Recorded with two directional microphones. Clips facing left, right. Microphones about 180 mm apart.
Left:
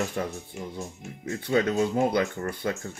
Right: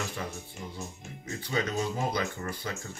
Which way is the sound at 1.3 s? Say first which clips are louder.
Left 7 dB; 55° left (ahead or behind).